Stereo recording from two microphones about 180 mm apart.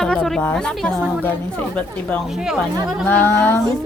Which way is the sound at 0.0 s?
5° left (ahead or behind).